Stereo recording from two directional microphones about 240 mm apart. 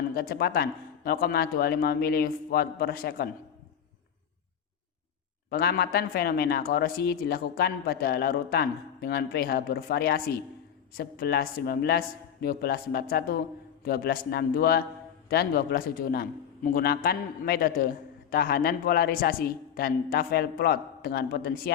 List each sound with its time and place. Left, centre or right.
0.1 s a man's voice: left
5.5 s a man's voice: left